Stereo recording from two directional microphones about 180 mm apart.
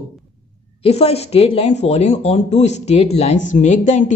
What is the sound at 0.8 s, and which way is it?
Speech, 35° left (ahead or behind).